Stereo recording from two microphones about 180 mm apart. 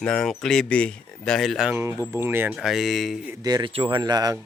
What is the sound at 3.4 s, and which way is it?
Speech, 25° right (ahead or behind).